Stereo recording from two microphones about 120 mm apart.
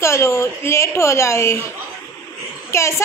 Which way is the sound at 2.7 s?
25° left (ahead or behind).